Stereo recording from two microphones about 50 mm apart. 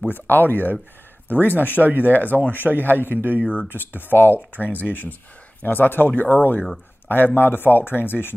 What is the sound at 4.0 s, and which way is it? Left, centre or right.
Speech, left.